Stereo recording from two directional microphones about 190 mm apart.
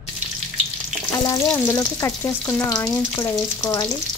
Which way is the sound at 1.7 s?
15° left (ahead or behind).